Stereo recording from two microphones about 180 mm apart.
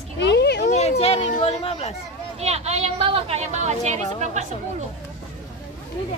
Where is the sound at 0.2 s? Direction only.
70° left (ahead or behind).